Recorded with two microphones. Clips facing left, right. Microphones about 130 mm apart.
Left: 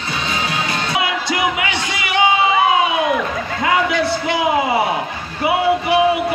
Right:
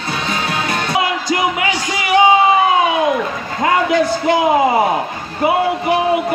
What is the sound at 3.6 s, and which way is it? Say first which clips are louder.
Speech: right 3 dB; 45° right (ahead or behind).